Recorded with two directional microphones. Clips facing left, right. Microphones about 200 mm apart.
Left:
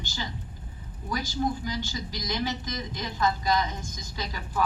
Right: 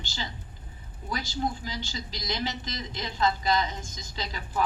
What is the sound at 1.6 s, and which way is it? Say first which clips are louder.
A man's voice: left 4 dB; 20° right (ahead or behind).